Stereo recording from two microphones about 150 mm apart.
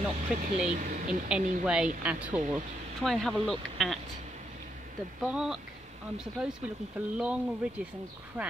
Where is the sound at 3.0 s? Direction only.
Centre (ahead or behind).